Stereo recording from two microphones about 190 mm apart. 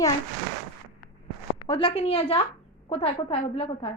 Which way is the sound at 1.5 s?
30° left (ahead or behind).